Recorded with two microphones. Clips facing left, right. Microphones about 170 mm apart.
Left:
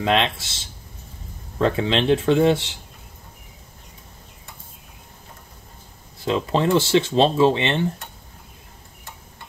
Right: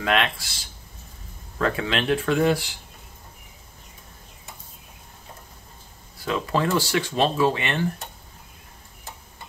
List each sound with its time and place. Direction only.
0.0 s speech: 25° left (ahead or behind)
6.1 s speech: 25° left (ahead or behind)